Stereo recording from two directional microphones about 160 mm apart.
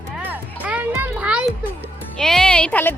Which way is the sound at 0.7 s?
10° right (ahead or behind).